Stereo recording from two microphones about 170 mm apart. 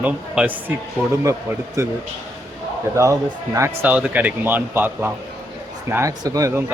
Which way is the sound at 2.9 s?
20° right (ahead or behind).